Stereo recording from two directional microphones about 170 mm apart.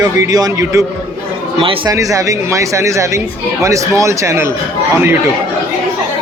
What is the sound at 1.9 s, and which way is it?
A man's voice, 20° right (ahead or behind).